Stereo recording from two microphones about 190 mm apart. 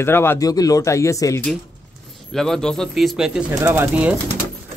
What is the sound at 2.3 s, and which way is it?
Speech, 5° left (ahead or behind).